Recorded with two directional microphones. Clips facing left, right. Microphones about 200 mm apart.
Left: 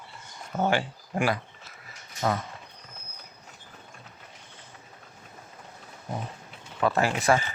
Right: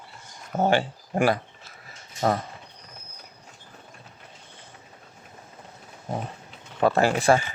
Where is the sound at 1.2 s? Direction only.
40° right (ahead or behind).